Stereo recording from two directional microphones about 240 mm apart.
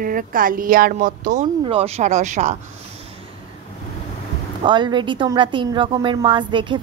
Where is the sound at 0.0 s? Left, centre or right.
Right.